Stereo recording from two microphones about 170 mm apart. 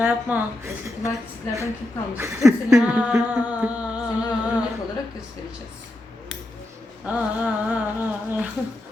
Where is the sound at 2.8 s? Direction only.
5° right (ahead or behind).